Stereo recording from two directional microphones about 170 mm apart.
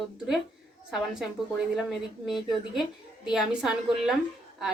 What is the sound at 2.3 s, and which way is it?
Speech, centre (ahead or behind).